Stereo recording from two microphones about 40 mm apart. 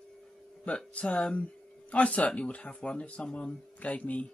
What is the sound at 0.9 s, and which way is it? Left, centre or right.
Speech, left.